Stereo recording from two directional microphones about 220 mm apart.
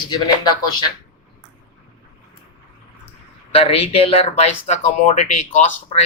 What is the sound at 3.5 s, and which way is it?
Speech, 25° left (ahead or behind).